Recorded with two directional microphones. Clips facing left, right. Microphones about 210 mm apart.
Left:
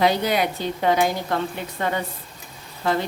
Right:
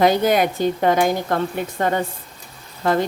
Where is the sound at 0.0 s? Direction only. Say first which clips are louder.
Right 4 dB; 50° right (ahead or behind).